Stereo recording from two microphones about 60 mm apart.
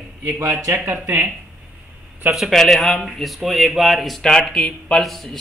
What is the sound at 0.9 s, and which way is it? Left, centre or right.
Speech, right.